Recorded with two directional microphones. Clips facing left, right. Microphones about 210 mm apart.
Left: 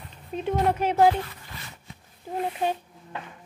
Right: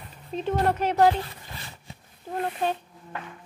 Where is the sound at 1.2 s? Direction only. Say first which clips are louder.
Right 1 dB; 30° right (ahead or behind).